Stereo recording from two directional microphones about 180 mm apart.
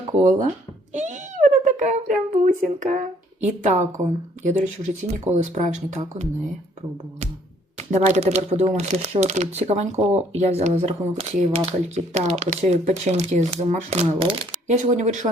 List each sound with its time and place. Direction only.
0.2 s speech: 40° right (ahead or behind)
7.8 s speech: 40° right (ahead or behind)